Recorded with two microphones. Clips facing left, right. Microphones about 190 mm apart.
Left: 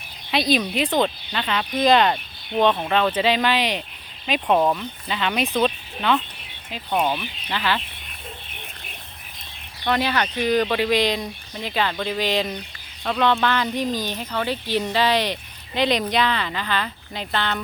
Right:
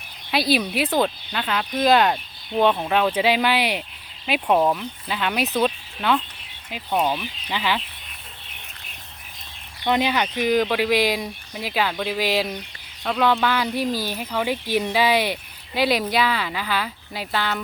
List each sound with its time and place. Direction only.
0.3 s speech: 5° right (ahead or behind)
7.5 s speech: 10° right (ahead or behind)
9.8 s speech: 15° right (ahead or behind)